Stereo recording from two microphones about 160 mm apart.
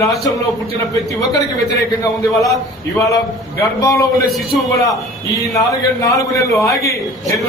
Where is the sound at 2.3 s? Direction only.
20° left (ahead or behind).